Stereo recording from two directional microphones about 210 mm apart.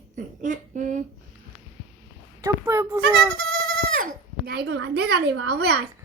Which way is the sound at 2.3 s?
15° right (ahead or behind).